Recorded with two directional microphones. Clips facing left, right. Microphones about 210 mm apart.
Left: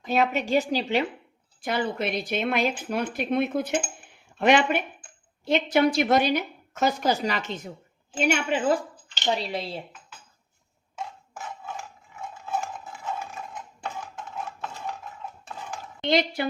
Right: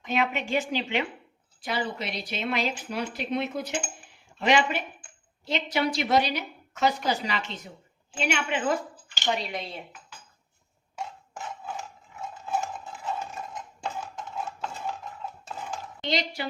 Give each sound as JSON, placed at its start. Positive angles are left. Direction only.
{"t": 0.0, "sound": "a woman's voice", "side_deg": 40}
{"t": 1.6, "sound": "a woman's voice", "side_deg": 55}
{"t": 12.8, "sound": "a sound", "side_deg": 0}
{"t": 16.0, "sound": "speech", "side_deg": 55}